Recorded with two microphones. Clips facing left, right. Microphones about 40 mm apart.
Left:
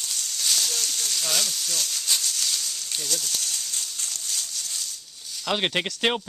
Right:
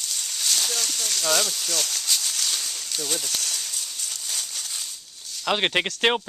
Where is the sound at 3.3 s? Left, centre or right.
Right.